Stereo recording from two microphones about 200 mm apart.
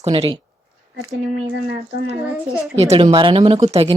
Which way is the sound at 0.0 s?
25° right (ahead or behind).